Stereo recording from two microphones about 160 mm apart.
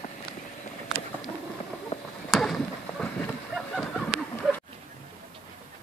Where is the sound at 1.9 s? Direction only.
40° left (ahead or behind).